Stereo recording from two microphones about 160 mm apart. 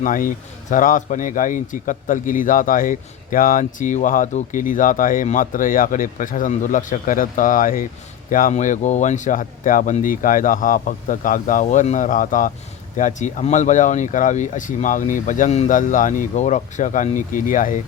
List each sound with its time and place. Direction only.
0.0 s speech: 55° left (ahead or behind)